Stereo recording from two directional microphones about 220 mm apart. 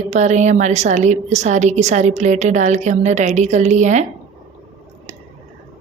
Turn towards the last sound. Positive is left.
turn(degrees=-35)  # may be behind; listen again after turning